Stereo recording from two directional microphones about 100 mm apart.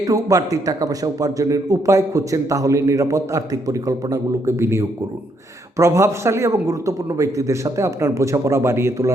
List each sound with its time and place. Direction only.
0.0 s a man's voice: 35° right (ahead or behind)